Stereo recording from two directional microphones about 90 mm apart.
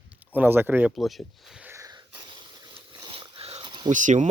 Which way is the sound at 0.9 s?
Centre (ahead or behind).